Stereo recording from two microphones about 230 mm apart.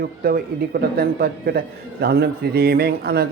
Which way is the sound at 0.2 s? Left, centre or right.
Right.